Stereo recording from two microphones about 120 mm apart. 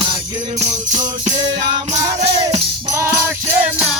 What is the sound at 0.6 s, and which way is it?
Music, 85° right.